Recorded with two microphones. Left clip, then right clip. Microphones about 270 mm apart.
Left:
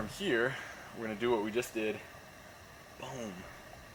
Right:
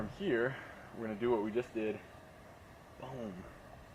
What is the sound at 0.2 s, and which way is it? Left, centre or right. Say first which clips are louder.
Speech: left 2 dB; centre.